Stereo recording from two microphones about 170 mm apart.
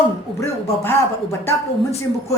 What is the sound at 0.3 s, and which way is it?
A man's voice, 15° left (ahead or behind).